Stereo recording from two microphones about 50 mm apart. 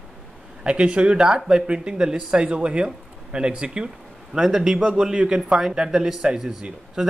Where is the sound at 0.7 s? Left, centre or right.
Right.